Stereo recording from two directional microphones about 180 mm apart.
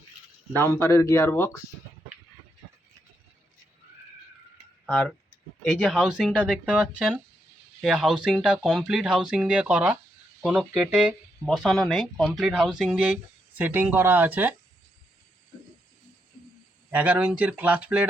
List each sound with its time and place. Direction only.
0.5 s speech: 15° left (ahead or behind)
4.9 s speech: centre (ahead or behind)
16.9 s speech: 10° right (ahead or behind)